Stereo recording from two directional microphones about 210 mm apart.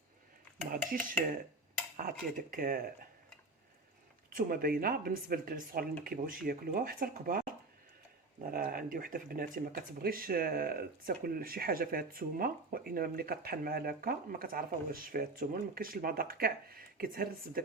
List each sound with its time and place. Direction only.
2.0 s speech: 45° right (ahead or behind)
4.4 s speech: 45° right (ahead or behind)
8.4 s speech: 45° right (ahead or behind)